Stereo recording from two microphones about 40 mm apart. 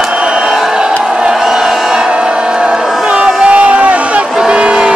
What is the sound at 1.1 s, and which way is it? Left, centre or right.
Crowd, right.